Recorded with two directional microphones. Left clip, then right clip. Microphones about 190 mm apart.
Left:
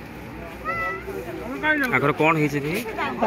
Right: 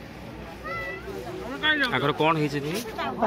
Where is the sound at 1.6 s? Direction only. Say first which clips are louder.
Left 2 dB; 30° left (ahead or behind).